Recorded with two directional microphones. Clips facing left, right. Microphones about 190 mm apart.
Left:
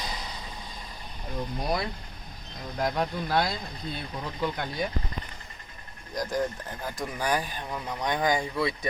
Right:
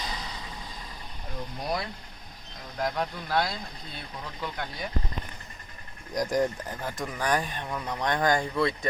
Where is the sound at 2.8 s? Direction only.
20° left (ahead or behind).